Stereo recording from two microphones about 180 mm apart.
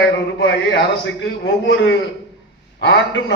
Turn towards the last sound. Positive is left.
turn(degrees=80)